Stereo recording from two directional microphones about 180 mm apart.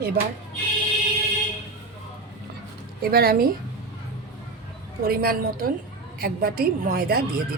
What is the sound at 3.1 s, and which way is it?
Speech, 55° right (ahead or behind).